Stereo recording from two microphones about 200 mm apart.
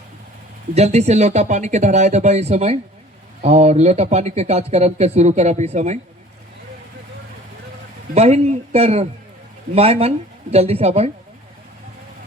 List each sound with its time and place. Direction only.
0.7 s speech: 30° right (ahead or behind)
8.1 s speech: 35° right (ahead or behind)